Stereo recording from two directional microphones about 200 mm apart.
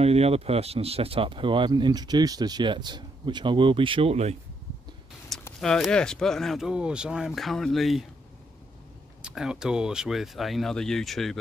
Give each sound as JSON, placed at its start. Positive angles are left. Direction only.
{"t": 0.0, "sound": "speech", "side_deg": -30}
{"t": 5.6, "sound": "speech", "side_deg": 0}
{"t": 9.2, "sound": "speech", "side_deg": -5}